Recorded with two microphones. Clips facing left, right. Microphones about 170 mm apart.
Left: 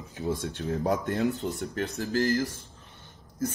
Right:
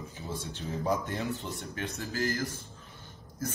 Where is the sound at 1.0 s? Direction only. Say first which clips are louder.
Left 7 dB; 50° left (ahead or behind).